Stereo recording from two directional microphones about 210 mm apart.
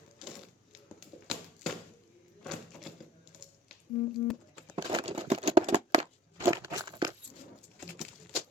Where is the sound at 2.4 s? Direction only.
Centre (ahead or behind).